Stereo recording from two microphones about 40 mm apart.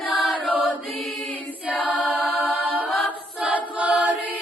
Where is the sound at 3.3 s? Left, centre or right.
Right.